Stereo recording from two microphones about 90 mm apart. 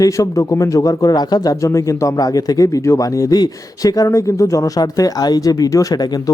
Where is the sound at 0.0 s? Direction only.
40° left (ahead or behind).